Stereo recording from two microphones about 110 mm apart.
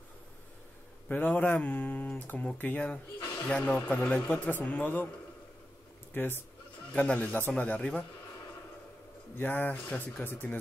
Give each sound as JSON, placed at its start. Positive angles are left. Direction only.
{"t": 1.0, "sound": "speech", "side_deg": 15}
{"t": 6.1, "sound": "speech", "side_deg": 20}
{"t": 9.4, "sound": "speech", "side_deg": 20}